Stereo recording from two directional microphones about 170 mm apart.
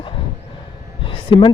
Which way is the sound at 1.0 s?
30° left (ahead or behind).